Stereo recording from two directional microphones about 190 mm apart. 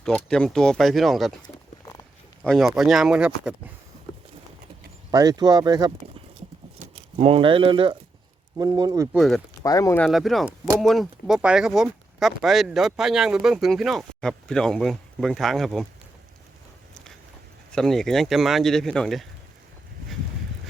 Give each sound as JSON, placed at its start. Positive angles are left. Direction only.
{"t": 0.0, "sound": "speech", "side_deg": 5}
{"t": 1.4, "sound": "bird", "side_deg": 20}
{"t": 2.4, "sound": "speech", "side_deg": 0}
{"t": 5.1, "sound": "speech", "side_deg": -20}
{"t": 6.7, "sound": "speech", "side_deg": -30}
{"t": 9.1, "sound": "speech", "side_deg": 0}
{"t": 9.6, "sound": "speech", "side_deg": 20}
{"t": 10.0, "sound": "speech", "side_deg": 0}
{"t": 17.7, "sound": "speech", "side_deg": 5}